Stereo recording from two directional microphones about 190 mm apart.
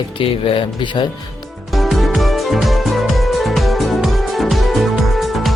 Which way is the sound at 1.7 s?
Centre (ahead or behind).